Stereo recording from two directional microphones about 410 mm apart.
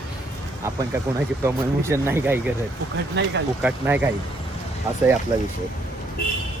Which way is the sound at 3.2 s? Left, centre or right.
Right.